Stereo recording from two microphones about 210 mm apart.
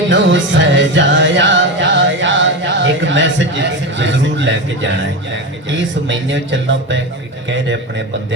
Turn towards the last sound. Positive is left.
turn(degrees=-60)  # may be behind; listen again after turning